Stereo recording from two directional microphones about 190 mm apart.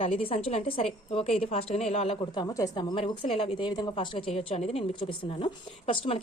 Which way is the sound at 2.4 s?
20° left (ahead or behind).